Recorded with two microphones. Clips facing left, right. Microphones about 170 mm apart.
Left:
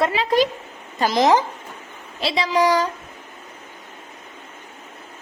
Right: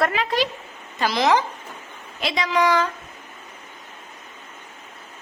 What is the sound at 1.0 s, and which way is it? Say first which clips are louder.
Speech: left 4 dB; 45° left (ahead or behind).